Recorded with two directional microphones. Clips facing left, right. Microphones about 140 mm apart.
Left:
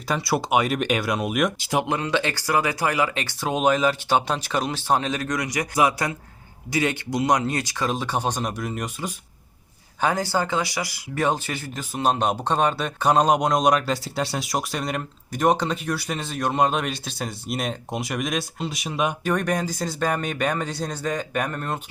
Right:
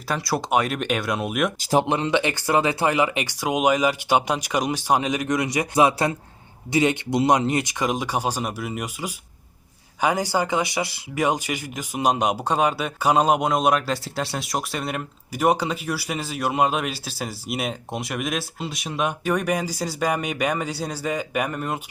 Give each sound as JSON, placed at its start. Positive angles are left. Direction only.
{"t": 0.1, "sound": "speech", "side_deg": 0}
{"t": 1.5, "sound": "speech", "side_deg": -40}
{"t": 1.8, "sound": "speech", "side_deg": -20}
{"t": 11.1, "sound": "speech", "side_deg": -10}